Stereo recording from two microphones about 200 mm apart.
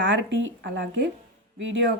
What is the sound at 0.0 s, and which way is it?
Speech, 65° right (ahead or behind).